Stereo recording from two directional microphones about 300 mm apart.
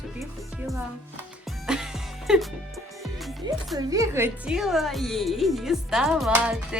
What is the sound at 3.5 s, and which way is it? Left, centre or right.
A child's voice, centre.